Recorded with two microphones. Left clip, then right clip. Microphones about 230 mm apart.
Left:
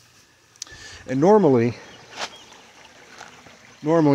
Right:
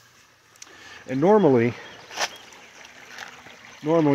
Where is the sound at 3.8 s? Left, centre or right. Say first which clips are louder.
Left 2 dB; centre.